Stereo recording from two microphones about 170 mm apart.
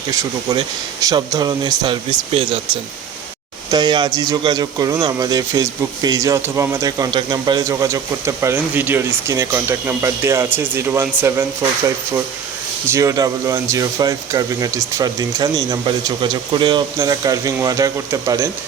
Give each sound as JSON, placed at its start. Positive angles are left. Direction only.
{"t": 0.1, "sound": "speech", "side_deg": -20}
{"t": 3.7, "sound": "speech", "side_deg": -25}
{"t": 12.9, "sound": "speech", "side_deg": -20}